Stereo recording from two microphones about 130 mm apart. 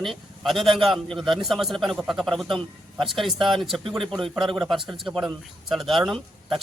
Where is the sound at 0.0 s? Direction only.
Centre (ahead or behind).